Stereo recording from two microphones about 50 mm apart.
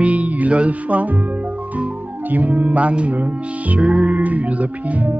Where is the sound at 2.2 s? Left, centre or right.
Right.